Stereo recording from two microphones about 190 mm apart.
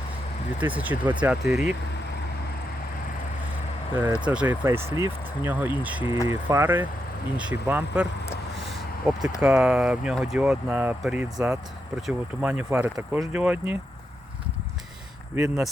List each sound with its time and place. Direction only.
0.6 s speech: 10° right (ahead or behind)
3.9 s speech: 10° right (ahead or behind)
9.4 s speech: 5° right (ahead or behind)
15.4 s speech: 10° right (ahead or behind)